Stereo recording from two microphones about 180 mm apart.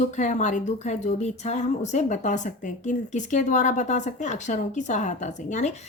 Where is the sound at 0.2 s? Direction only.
40° left (ahead or behind).